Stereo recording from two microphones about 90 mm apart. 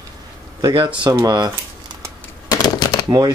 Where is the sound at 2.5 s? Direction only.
45° left (ahead or behind).